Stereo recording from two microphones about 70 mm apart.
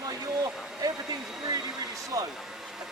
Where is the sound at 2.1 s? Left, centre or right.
Right.